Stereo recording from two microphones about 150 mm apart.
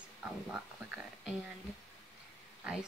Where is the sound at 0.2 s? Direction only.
10° right (ahead or behind).